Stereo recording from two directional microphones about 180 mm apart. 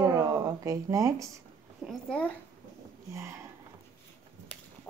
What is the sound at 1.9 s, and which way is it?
Speech, 5° left (ahead or behind).